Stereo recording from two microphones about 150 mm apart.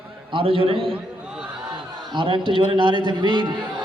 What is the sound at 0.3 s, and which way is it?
Speech, 35° right (ahead or behind).